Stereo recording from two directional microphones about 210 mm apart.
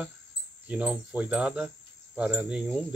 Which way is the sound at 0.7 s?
5° right (ahead or behind).